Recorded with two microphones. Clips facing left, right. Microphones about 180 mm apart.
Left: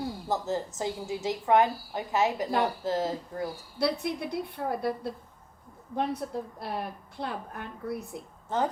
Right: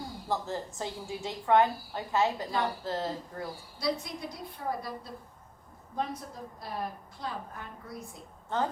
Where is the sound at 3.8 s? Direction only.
65° left (ahead or behind).